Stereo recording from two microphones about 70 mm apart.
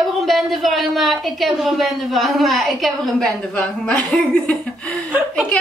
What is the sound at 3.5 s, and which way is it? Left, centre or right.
Speech, centre.